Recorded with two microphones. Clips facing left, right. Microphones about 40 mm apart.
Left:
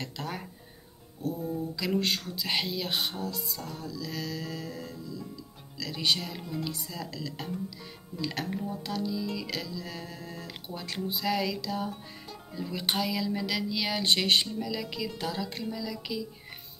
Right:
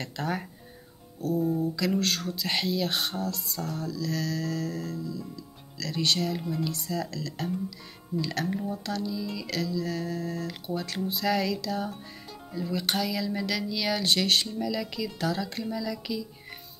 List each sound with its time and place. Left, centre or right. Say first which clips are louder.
0.0 s music: right 5 dB; centre
1.8 s speech: right 2 dB; centre
8.5 s music: right 3 dB; centre
9.5 s speech: right 6 dB; centre
12.7 s speech: right 1 dB; centre
14.0 s speech: left 2 dB; left
14.7 s speech: right 2 dB; centre
15.4 s music: right 3 dB; centre